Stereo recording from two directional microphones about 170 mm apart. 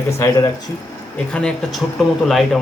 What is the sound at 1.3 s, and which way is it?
Speech, 5° left (ahead or behind).